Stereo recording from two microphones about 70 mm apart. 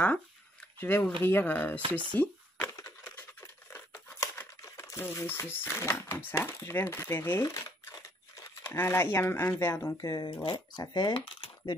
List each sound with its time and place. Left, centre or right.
0.7 s speech: left
2.7 s a sound: left
3.3 s a sound: left
4.6 s speech: left
8.6 s speech: left
10.0 s speech: left
10.5 s speech: left